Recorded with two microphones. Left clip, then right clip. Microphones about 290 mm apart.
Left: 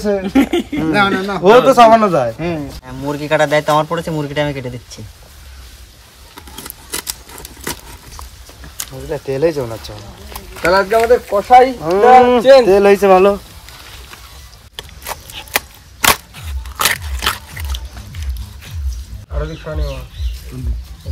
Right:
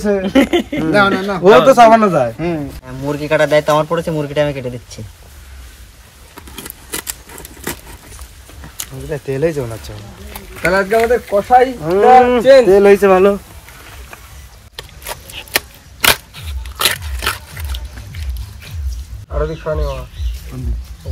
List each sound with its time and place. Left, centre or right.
0.0 s a man's voice: centre
6.5 s scissors: centre
8.7 s speech: left
14.8 s a sound: centre